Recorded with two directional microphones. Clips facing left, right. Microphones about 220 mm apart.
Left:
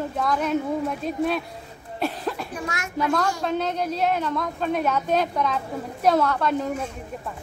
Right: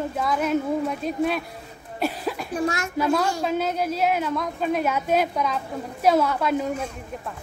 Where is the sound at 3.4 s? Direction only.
5° right (ahead or behind).